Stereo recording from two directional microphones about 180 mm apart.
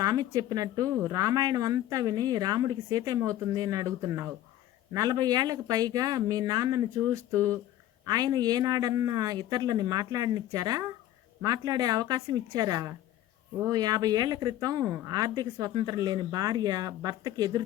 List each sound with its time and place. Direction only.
0.0 s speech: 20° right (ahead or behind)